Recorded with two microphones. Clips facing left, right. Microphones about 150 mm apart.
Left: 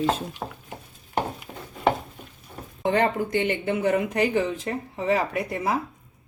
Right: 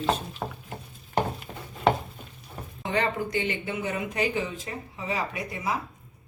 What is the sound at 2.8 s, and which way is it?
Speech, 50° left (ahead or behind).